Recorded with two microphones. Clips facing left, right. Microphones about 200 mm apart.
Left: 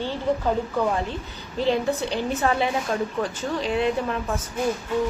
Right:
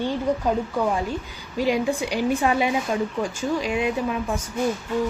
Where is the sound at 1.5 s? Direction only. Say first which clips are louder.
Right 1 dB; 10° right (ahead or behind).